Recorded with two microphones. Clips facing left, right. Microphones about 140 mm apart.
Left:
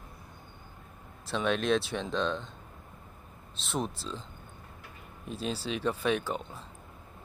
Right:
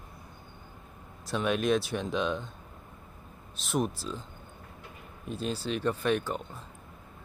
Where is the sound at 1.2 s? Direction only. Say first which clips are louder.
Right 1 dB; 5° right (ahead or behind).